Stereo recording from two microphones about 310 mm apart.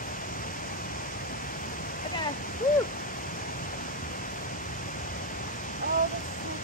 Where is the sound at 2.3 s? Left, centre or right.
Left.